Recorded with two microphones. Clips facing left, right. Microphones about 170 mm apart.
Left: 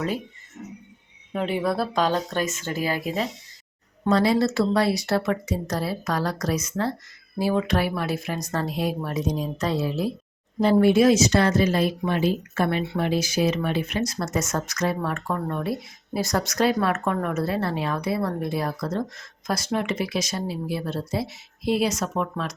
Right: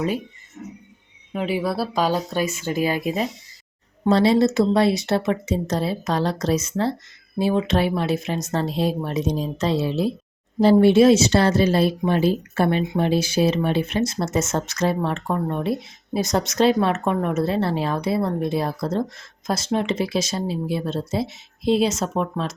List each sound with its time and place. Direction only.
1.3 s speech: 5° right (ahead or behind); by 22.5 s 25° right (ahead or behind)